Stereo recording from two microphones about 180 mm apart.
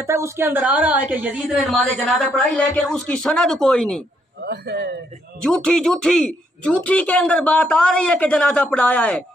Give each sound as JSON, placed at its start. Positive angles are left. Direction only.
{"t": 0.0, "sound": "a woman's voice", "side_deg": -15}
{"t": 4.5, "sound": "a man's voice", "side_deg": -65}
{"t": 5.4, "sound": "a woman's voice", "side_deg": 5}